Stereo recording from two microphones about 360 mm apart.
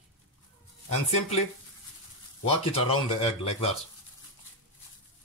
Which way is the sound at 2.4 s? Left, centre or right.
Centre.